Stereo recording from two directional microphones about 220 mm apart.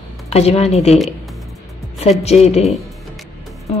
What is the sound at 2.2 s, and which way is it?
Speech, 30° left (ahead or behind).